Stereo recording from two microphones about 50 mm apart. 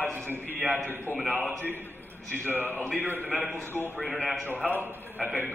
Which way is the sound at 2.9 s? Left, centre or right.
Left.